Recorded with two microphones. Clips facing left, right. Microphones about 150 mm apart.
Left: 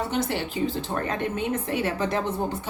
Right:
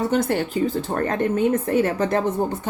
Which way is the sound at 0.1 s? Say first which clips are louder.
Right 6 dB; 50° right (ahead or behind).